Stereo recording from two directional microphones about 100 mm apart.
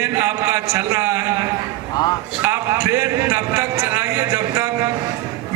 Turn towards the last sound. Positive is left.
turn(degrees=-30)  # may be behind; listen again after turning